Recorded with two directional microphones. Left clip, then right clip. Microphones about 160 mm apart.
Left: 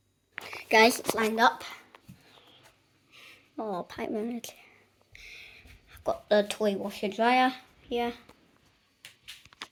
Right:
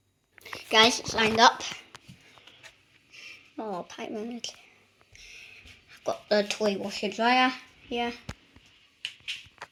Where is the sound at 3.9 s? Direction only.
35° left (ahead or behind).